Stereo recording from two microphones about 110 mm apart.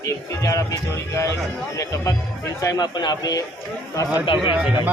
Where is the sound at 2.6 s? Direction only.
35° left (ahead or behind).